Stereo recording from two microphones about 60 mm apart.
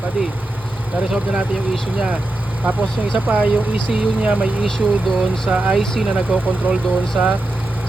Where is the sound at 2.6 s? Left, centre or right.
Right.